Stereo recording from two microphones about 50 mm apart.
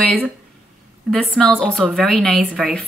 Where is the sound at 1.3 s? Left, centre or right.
Centre.